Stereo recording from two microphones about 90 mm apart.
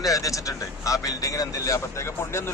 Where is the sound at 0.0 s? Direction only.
40° left (ahead or behind).